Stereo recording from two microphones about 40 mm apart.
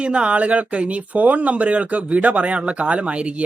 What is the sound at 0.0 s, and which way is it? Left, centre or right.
A man's voice, right.